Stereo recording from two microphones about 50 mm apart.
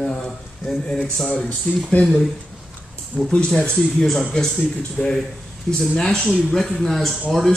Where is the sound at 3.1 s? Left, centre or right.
Centre.